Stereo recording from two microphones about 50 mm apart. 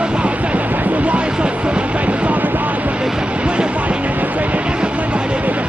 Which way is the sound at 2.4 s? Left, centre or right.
Right.